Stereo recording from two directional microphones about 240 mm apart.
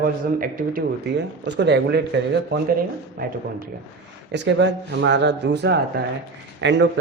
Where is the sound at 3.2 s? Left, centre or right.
Right.